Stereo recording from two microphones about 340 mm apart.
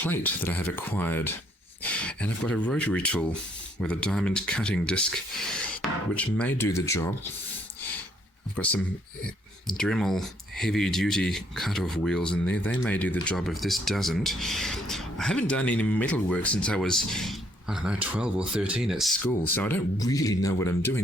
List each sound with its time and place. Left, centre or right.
0.0 s speech: centre
9.2 s speech: centre